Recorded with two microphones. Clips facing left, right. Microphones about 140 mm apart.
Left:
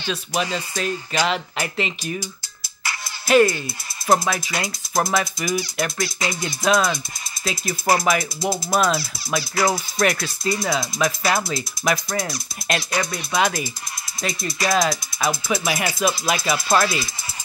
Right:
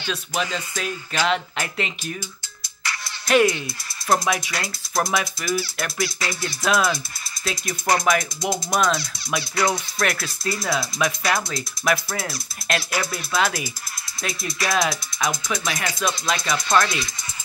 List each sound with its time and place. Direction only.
0.1 s music: 5° left (ahead or behind)
3.3 s speech: centre (ahead or behind)
4.1 s music: centre (ahead or behind)
5.4 s speech: 20° left (ahead or behind)
5.8 s music: centre (ahead or behind)
13.3 s speech: 10° left (ahead or behind)
14.2 s music: centre (ahead or behind)